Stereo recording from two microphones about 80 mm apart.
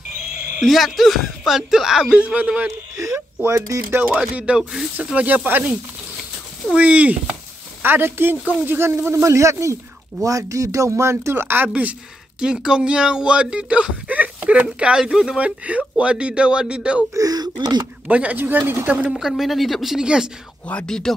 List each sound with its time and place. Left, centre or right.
0.6 s speech: centre
4.4 s speech: centre
12.4 s speech: centre
17.1 s speech: right
17.6 s speech: right
18.0 s speech: centre
19.0 s speech: centre
20.6 s speech: centre